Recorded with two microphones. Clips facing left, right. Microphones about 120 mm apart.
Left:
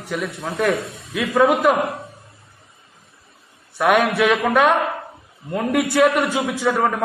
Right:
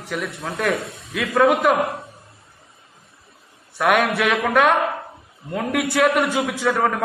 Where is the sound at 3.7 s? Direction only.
Centre (ahead or behind).